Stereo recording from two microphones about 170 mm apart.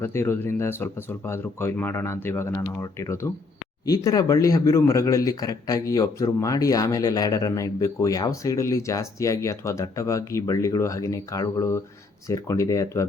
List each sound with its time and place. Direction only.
0.0 s speech: 15° left (ahead or behind)